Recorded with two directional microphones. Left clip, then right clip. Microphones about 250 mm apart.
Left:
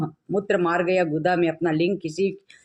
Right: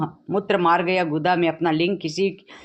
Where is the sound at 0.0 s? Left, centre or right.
Right.